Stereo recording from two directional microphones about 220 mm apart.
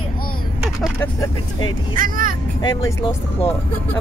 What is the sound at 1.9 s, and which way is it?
Speech, 40° right (ahead or behind).